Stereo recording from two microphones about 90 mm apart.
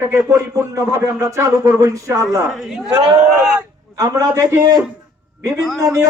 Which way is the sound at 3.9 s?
40° right (ahead or behind).